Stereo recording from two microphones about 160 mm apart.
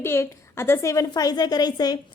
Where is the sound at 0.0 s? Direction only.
15° left (ahead or behind).